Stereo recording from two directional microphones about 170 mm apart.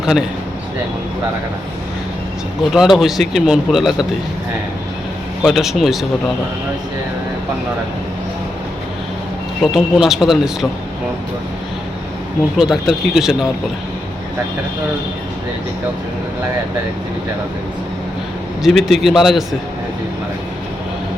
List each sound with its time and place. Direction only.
0.0 s speech: 5° right (ahead or behind)
2.7 s speech: centre (ahead or behind)
5.4 s speech: centre (ahead or behind)
9.7 s speech: centre (ahead or behind)
12.5 s speech: centre (ahead or behind)
18.6 s speech: centre (ahead or behind)